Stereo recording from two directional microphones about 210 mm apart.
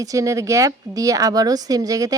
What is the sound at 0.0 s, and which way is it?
Speech, 15° right (ahead or behind).